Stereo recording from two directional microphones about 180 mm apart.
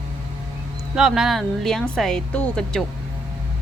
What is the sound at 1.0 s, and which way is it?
Speech, centre (ahead or behind).